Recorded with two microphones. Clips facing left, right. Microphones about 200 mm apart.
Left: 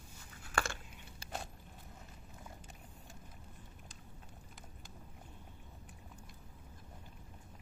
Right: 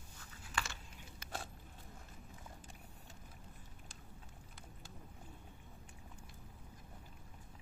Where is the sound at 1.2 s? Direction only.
30° left (ahead or behind).